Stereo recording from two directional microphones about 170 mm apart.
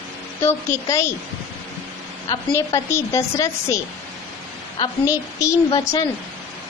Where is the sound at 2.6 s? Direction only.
15° left (ahead or behind).